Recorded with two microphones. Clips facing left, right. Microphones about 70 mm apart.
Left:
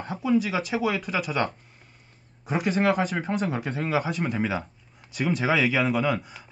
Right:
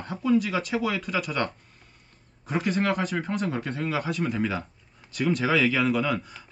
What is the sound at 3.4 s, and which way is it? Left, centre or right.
Speech, centre.